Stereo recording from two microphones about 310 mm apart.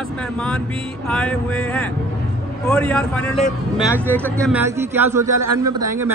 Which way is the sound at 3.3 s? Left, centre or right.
Left.